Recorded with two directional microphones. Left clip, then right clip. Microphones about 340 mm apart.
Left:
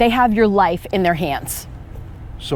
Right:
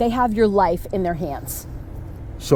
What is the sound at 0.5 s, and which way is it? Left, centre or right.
Speech, centre.